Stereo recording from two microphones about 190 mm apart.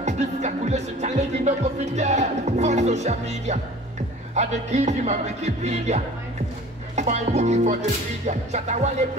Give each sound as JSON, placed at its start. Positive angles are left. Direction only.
{"t": 0.0, "sound": "music", "side_deg": -35}